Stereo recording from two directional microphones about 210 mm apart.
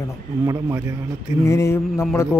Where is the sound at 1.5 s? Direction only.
15° left (ahead or behind).